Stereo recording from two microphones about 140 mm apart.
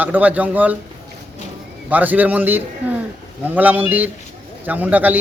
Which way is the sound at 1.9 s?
10° right (ahead or behind).